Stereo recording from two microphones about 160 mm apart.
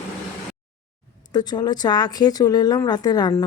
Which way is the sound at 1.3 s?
25° left (ahead or behind).